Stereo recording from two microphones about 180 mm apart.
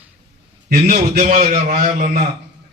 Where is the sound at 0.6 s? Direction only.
55° right (ahead or behind).